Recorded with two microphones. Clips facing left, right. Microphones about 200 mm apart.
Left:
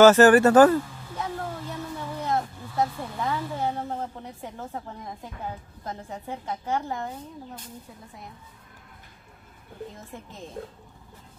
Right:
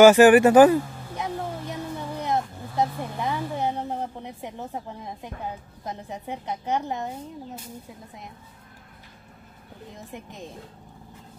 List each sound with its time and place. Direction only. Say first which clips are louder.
0.0 s a sound: right 2 dB; 15° right (ahead or behind)
5.9 s a woman's voice: right 1 dB; 20° right (ahead or behind)
10.1 s a woman's voice: right 2 dB; 15° right (ahead or behind)
10.6 s speech: left 7 dB; 55° left (ahead or behind)